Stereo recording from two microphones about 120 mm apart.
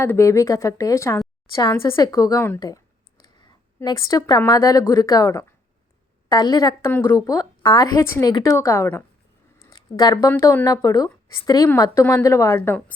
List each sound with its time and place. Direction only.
0.0 s a woman's voice: 20° left (ahead or behind)
2.6 s a sound: 30° left (ahead or behind)
3.8 s a woman's voice: 30° left (ahead or behind)
6.8 s a woman's voice: 20° left (ahead or behind)
7.3 s a woman's voice: 30° left (ahead or behind)
8.5 s a woman's voice: 25° left (ahead or behind)
9.6 s a sound: 30° left (ahead or behind)
10.2 s a woman's voice: 20° left (ahead or behind)